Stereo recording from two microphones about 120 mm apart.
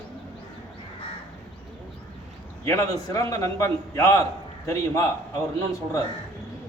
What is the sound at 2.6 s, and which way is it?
A man's voice, 25° left (ahead or behind).